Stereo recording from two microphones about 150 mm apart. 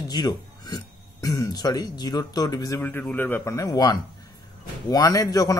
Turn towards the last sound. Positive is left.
turn(degrees=25)  # may be behind; listen again after turning